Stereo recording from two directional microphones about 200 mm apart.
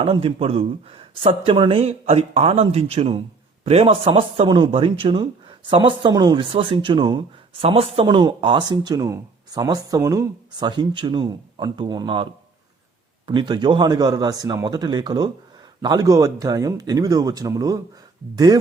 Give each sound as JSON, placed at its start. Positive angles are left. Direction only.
{"t": 0.0, "sound": "a man's voice", "side_deg": -25}